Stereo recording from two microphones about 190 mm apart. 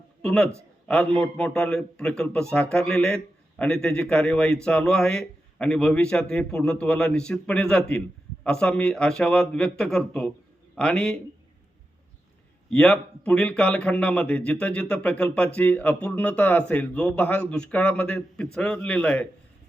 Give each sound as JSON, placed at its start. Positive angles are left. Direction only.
{"t": 0.2, "sound": "a man's voice", "side_deg": 5}
{"t": 12.7, "sound": "a man's voice", "side_deg": 5}